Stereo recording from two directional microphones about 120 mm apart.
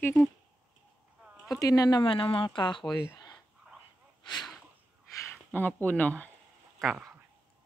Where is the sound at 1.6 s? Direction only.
30° left (ahead or behind).